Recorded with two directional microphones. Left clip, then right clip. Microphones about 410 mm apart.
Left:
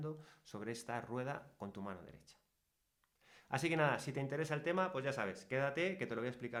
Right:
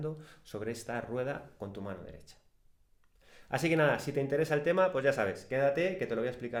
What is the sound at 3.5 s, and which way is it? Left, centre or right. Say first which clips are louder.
Speech: right 7 dB; centre.